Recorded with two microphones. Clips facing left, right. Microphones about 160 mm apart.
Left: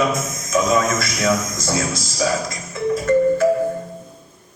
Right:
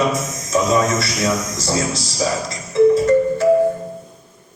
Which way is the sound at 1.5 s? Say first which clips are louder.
Right 2 dB; 35° right (ahead or behind).